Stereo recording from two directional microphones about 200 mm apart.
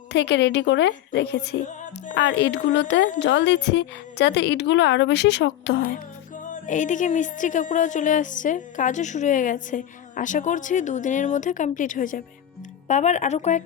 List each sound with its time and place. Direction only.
0.1 s a woman's voice: 60° left (ahead or behind); by 13.6 s 35° left (ahead or behind)